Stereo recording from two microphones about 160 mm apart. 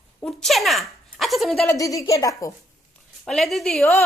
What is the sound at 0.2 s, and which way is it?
Speech, 5° left (ahead or behind).